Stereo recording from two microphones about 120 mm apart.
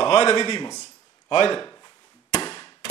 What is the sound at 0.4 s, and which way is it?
Speech, 35° left (ahead or behind).